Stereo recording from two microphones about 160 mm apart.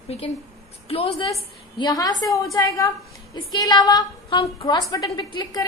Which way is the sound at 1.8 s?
25° left (ahead or behind).